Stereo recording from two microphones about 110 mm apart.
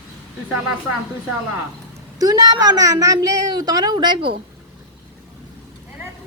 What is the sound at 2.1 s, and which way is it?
A woman's voice, 35° right (ahead or behind).